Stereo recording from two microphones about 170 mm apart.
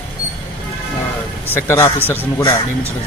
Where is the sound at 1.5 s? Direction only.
15° left (ahead or behind).